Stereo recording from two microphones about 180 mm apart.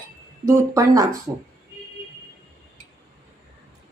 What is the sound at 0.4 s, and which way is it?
Speech, 15° right (ahead or behind).